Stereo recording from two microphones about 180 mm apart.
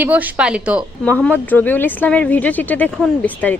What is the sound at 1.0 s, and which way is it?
Speech, 10° left (ahead or behind).